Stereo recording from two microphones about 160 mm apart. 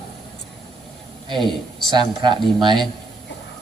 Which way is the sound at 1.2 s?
30° right (ahead or behind).